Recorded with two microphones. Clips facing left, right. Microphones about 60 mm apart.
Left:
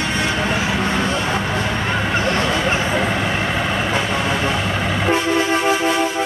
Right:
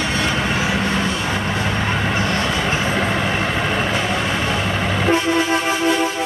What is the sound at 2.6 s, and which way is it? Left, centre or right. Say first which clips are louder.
Vehicle: left 1 dB; centre.